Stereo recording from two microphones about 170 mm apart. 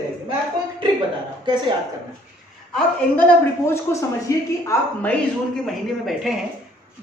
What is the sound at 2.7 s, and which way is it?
A man's voice, 10° left (ahead or behind).